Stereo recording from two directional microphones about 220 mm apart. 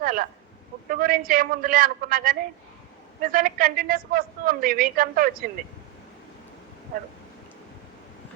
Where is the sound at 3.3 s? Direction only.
40° right (ahead or behind).